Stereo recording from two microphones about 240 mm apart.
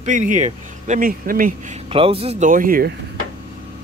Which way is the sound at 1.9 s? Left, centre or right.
Right.